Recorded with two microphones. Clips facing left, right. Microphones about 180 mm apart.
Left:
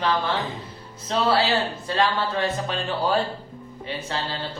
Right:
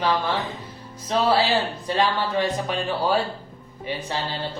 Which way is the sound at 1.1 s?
15° right (ahead or behind).